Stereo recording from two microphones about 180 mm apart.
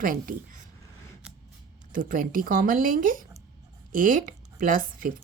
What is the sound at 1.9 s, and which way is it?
Speech, 50° right (ahead or behind).